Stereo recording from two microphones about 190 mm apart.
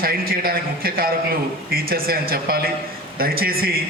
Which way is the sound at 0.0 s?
50° right (ahead or behind).